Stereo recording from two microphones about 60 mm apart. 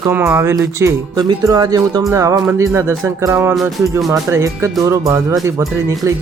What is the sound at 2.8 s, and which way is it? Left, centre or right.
Speech, right.